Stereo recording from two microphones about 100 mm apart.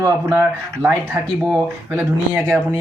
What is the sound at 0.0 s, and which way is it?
Speech, 30° right (ahead or behind).